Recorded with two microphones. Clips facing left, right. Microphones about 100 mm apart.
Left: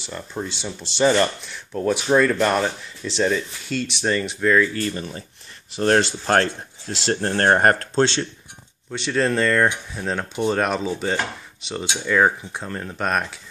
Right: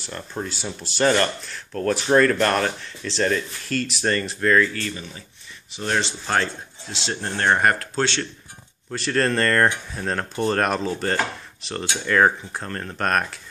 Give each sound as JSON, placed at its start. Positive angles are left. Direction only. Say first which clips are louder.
{"t": 0.0, "sound": "speech", "louder": "left 1 dB", "side_deg": 0}
{"t": 1.0, "sound": "speech", "louder": "left 2 dB", "side_deg": 10}
{"t": 4.9, "sound": "speech", "louder": "left 6 dB", "side_deg": 45}
{"t": 7.9, "sound": "speech", "louder": "left 4 dB", "side_deg": 20}
{"t": 8.9, "sound": "speech", "louder": "left 1 dB", "side_deg": 0}